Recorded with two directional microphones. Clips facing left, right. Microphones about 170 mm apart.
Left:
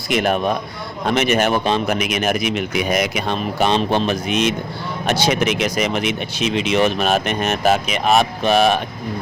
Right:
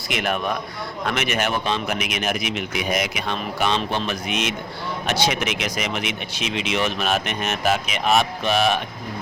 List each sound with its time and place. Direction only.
0.1 s speech: 35° left (ahead or behind)